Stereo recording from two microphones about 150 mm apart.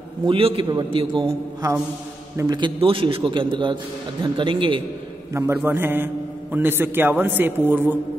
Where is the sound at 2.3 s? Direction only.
25° right (ahead or behind).